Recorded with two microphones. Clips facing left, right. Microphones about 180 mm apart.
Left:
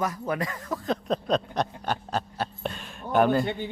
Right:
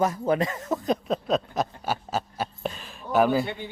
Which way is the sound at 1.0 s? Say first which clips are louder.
Even; 5° right (ahead or behind).